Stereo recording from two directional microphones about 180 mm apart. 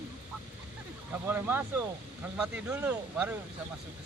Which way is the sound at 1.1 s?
10° right (ahead or behind).